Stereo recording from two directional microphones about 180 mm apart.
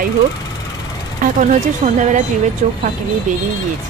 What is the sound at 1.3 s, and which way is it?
A woman's voice, 45° right (ahead or behind).